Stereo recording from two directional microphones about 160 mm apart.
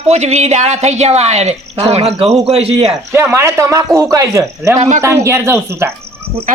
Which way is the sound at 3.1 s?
15° right (ahead or behind).